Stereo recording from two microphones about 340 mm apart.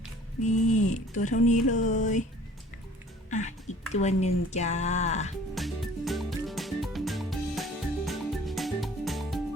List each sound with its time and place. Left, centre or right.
0.4 s speech: left
3.2 s music: left
5.5 s music: centre